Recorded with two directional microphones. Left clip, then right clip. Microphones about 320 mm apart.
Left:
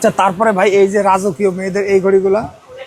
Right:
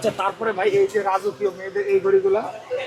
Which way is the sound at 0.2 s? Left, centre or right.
Left.